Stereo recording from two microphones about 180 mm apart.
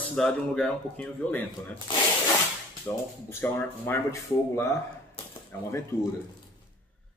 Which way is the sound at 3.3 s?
10° left (ahead or behind).